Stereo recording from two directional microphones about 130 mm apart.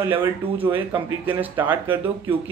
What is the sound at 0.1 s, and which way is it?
Speech, 15° right (ahead or behind).